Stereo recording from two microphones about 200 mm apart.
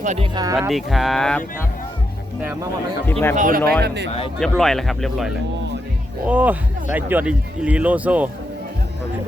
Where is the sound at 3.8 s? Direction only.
55° right (ahead or behind).